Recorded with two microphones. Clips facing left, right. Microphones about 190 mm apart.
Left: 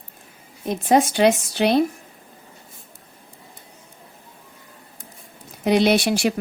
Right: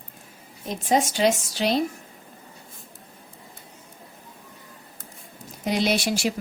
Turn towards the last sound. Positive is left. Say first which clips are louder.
# left 5 dB
turn(degrees=60)  # may be behind; listen again after turning